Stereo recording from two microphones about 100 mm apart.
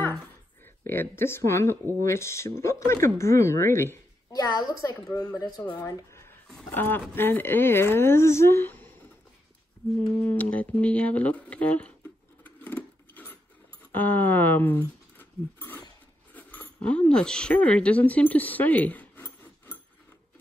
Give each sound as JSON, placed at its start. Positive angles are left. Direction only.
{"t": 0.8, "sound": "speech", "side_deg": 25}
{"t": 4.3, "sound": "speech", "side_deg": 40}
{"t": 5.9, "sound": "a sound", "side_deg": 25}
{"t": 6.7, "sound": "speech", "side_deg": 20}
{"t": 10.2, "sound": "speech", "side_deg": 15}
{"t": 12.4, "sound": "a sound", "side_deg": 15}
{"t": 13.9, "sound": "speech", "side_deg": 20}